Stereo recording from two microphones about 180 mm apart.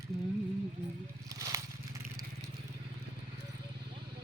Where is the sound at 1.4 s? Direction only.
20° right (ahead or behind).